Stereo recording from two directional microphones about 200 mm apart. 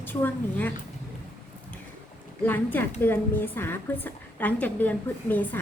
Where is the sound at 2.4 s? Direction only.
10° left (ahead or behind).